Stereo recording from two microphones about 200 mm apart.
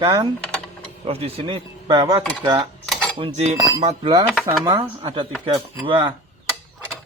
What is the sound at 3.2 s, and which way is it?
Speech, 30° right (ahead or behind).